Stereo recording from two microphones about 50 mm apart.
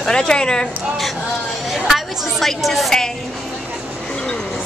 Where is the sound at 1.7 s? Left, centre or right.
Centre.